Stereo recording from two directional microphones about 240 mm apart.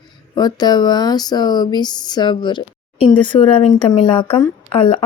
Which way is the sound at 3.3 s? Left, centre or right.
Left.